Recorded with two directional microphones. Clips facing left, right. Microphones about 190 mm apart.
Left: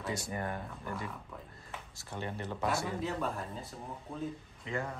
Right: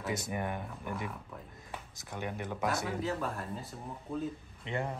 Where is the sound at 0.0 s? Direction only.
20° right (ahead or behind).